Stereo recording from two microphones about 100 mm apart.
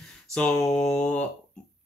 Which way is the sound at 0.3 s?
10° left (ahead or behind).